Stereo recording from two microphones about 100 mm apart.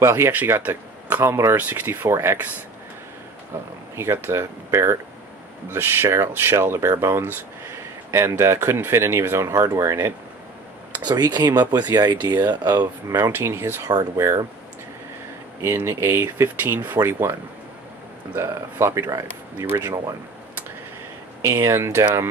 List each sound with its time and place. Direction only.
0.0 s speech: 25° right (ahead or behind)
3.9 s speech: 25° right (ahead or behind)
10.9 s speech: 45° right (ahead or behind)
13.3 s speech: 25° right (ahead or behind)
13.8 s speech: 35° right (ahead or behind)
15.6 s speech: 25° right (ahead or behind)
19.6 s speech: 20° right (ahead or behind)
21.4 s speech: 30° right (ahead or behind)